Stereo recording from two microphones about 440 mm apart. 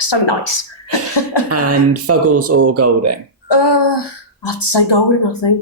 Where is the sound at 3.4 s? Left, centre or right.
Left.